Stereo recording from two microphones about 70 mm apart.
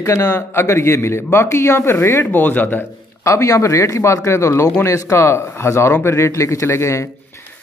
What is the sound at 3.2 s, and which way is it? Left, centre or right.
A man's voice, left.